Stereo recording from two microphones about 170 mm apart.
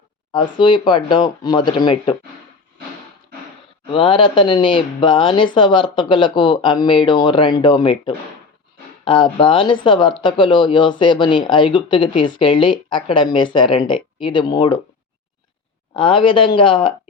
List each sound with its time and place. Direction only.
0.6 s speech: 30° left (ahead or behind)
3.9 s speech: 30° left (ahead or behind)
16.0 s speech: 30° left (ahead or behind)